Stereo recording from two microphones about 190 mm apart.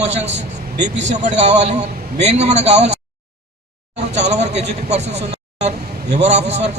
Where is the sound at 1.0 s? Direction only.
40° right (ahead or behind).